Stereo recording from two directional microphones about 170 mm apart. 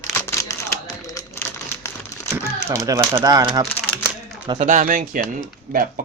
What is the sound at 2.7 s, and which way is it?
Speech, 20° right (ahead or behind).